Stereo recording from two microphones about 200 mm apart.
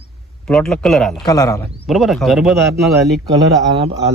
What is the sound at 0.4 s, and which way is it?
Speech, 5° left (ahead or behind).